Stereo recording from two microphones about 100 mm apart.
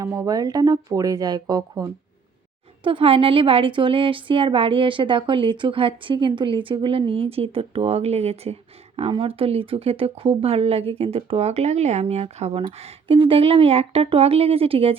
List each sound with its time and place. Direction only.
0.0 s speech: 35° right (ahead or behind)
2.8 s a woman's voice: 60° right (ahead or behind); by 8.5 s 90° right
9.1 s speech: 65° right (ahead or behind); by 12.6 s 85° right
12.8 s speech: 65° right (ahead or behind)